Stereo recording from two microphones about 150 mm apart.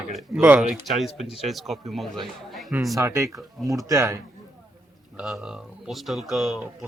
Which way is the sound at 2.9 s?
20° right (ahead or behind).